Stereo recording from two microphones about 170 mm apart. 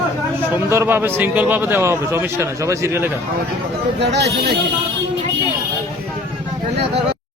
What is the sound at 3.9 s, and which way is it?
Speech, 85° right.